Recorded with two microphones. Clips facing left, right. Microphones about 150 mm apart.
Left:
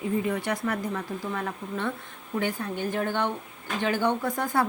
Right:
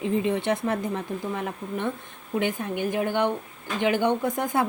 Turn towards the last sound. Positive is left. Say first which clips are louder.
# right 1 dB
turn(degrees=-20)  # may be behind; listen again after turning